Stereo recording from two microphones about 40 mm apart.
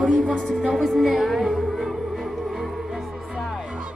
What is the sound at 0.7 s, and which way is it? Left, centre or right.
Music, centre.